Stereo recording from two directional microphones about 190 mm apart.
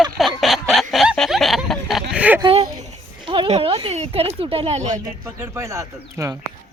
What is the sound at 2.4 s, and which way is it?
Speech, 25° right (ahead or behind).